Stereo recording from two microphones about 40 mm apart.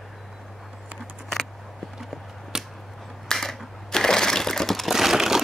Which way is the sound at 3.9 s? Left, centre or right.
Centre.